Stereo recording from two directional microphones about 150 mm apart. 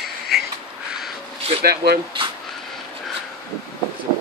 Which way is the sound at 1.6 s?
90° right.